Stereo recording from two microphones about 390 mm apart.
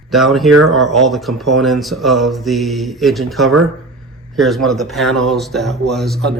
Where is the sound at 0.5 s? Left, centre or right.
Right.